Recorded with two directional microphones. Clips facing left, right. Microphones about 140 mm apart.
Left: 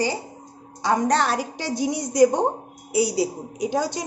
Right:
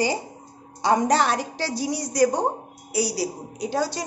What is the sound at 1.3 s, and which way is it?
Speech, 10° left (ahead or behind).